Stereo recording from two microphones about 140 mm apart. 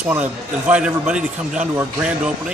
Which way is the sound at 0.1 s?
10° right (ahead or behind).